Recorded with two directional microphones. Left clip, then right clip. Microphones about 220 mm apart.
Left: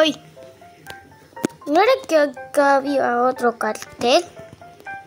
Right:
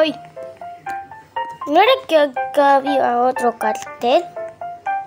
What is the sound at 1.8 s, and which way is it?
Speech, centre (ahead or behind).